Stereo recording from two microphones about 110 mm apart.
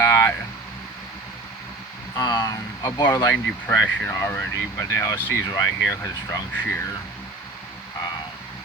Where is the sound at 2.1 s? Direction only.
35° left (ahead or behind).